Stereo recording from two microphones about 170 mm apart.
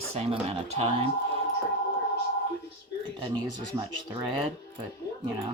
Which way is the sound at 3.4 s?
90° left.